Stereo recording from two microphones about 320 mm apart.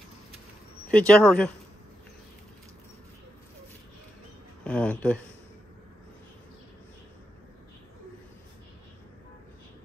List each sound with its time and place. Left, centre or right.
0.8 s speech: centre
4.6 s speech: centre